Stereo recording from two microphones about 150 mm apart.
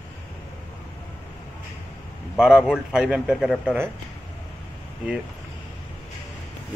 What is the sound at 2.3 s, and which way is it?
Speech, 5° right (ahead or behind).